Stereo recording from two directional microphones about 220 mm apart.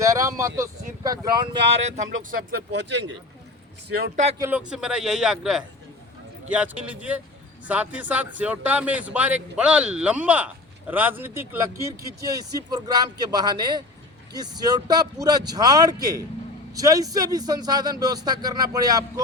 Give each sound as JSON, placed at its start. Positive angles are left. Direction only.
{"t": 0.0, "sound": "speech", "side_deg": -15}
{"t": 2.7, "sound": "speech", "side_deg": -55}
{"t": 4.4, "sound": "a man's voice", "side_deg": -10}